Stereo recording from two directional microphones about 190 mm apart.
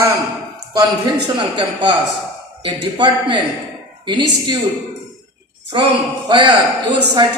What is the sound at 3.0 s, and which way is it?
A woman's voice, 25° right (ahead or behind).